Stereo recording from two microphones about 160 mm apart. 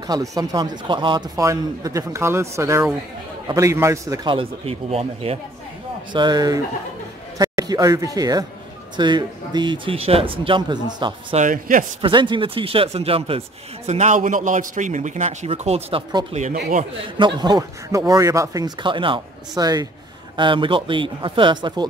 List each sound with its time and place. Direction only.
0.0 s speech: 20° right (ahead or behind)
4.3 s speech: 35° right (ahead or behind)
6.1 s speech: 25° right (ahead or behind)
11.3 s a man's voice: 55° right (ahead or behind)
12.0 s speech: 30° right (ahead or behind)
13.8 s a man's voice: 45° right (ahead or behind)
17.2 s speech: 25° right (ahead or behind)